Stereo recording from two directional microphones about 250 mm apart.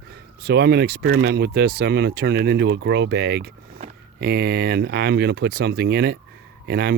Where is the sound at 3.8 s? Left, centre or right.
Right.